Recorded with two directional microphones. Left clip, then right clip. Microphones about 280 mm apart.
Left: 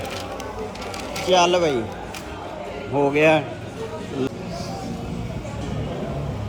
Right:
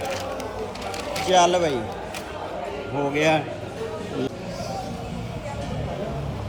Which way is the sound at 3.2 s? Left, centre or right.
Left.